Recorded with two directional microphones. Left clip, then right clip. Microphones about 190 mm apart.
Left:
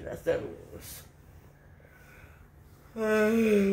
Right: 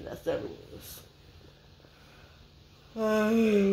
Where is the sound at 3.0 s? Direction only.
25° right (ahead or behind).